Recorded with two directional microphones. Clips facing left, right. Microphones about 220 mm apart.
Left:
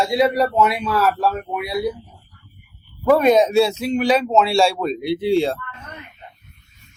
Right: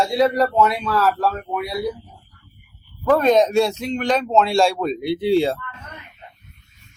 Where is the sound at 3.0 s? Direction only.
10° left (ahead or behind).